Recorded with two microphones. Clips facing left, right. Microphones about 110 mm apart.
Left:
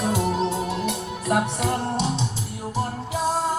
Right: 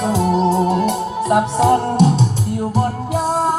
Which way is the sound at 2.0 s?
50° right (ahead or behind).